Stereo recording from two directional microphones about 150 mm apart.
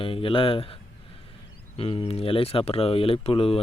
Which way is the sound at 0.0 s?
35° left (ahead or behind).